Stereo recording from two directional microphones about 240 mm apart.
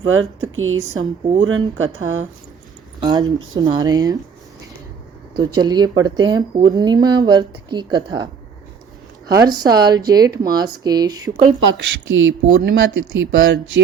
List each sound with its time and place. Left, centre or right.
0.0 s speech: right
3.0 s speech: centre
5.5 s speech: centre
9.4 s speech: centre
11.6 s speech: right